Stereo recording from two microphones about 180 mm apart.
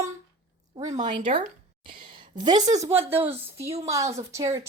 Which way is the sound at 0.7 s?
30° right (ahead or behind).